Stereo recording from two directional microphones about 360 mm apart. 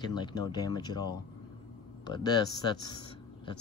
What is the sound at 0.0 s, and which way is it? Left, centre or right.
Speech, centre.